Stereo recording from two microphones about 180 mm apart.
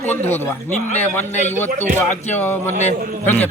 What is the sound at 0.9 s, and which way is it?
Speech, 10° left (ahead or behind).